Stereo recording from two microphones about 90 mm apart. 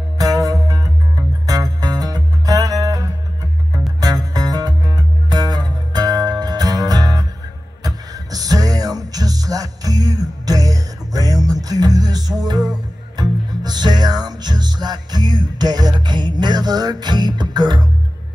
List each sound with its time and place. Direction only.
0.2 s music: 40° right (ahead or behind)